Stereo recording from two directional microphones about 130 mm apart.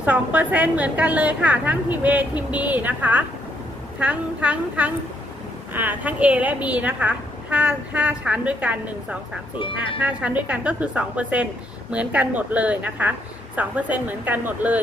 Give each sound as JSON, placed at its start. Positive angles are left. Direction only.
{"t": 0.0, "sound": "a woman's voice", "side_deg": -10}
{"t": 9.6, "sound": "speech", "side_deg": 40}
{"t": 10.0, "sound": "a woman's voice", "side_deg": -10}